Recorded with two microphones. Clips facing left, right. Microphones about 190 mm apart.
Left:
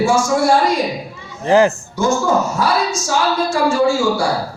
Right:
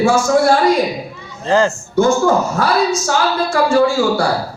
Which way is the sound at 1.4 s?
15° left (ahead or behind).